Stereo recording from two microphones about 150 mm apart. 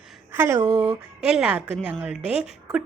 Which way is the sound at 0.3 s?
15° right (ahead or behind).